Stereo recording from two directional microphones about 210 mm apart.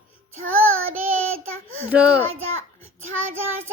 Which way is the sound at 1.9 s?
5° right (ahead or behind).